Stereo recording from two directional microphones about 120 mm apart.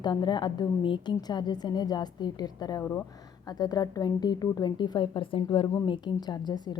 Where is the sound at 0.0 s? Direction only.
40° left (ahead or behind).